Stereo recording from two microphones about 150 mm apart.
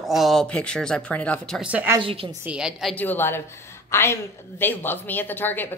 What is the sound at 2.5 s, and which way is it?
Speech, 5° right (ahead or behind).